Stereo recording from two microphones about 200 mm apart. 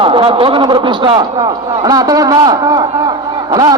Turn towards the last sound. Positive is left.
turn(degrees=-20)  # may be behind; listen again after turning